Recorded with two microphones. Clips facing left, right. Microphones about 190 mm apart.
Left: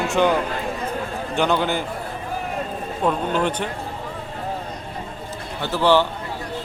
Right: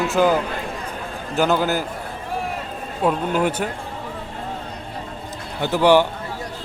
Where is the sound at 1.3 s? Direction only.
5° right (ahead or behind).